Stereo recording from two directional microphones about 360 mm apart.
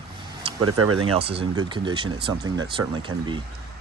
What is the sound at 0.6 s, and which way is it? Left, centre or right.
Speech, right.